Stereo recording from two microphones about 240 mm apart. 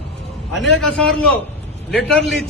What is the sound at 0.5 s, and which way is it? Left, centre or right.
A man's voice, centre.